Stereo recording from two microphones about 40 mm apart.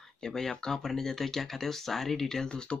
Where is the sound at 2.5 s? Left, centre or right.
Left.